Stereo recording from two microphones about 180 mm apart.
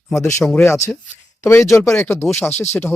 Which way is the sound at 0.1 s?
15° left (ahead or behind).